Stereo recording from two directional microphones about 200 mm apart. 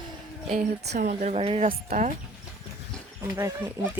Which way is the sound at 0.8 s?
55° right (ahead or behind).